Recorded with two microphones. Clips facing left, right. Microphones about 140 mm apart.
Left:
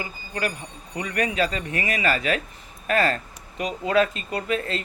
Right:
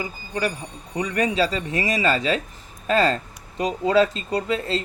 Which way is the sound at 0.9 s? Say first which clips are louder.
Right 3 dB; 25° right (ahead or behind).